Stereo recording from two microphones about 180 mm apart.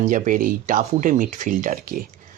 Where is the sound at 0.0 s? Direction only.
45° right (ahead or behind).